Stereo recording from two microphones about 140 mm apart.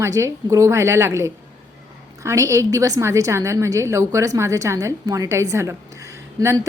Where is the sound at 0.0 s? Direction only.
20° right (ahead or behind).